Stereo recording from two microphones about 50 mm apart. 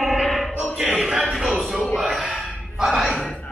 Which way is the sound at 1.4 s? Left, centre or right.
Centre.